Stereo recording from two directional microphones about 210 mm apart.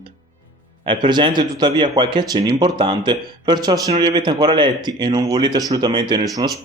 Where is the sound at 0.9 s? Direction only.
20° right (ahead or behind).